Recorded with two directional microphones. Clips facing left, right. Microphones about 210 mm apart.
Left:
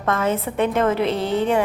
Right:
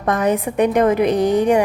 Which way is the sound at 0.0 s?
15° right (ahead or behind).